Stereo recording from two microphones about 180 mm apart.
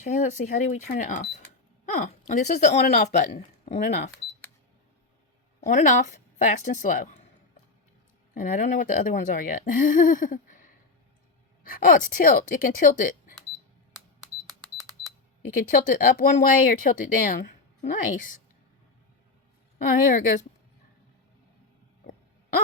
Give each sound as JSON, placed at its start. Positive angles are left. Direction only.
{"t": 0.0, "sound": "speech", "side_deg": 45}
{"t": 5.6, "sound": "speech", "side_deg": 45}
{"t": 8.4, "sound": "speech", "side_deg": 45}
{"t": 11.6, "sound": "speech", "side_deg": 50}
{"t": 14.4, "sound": "cash register", "side_deg": 0}
{"t": 15.5, "sound": "speech", "side_deg": 50}
{"t": 19.8, "sound": "speech", "side_deg": 50}
{"t": 22.0, "sound": "a sound", "side_deg": 50}